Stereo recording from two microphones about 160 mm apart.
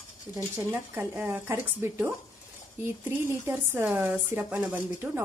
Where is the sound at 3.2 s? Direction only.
15° right (ahead or behind).